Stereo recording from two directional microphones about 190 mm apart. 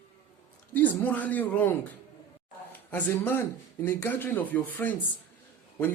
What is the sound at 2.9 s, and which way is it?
A man's voice, 10° left (ahead or behind).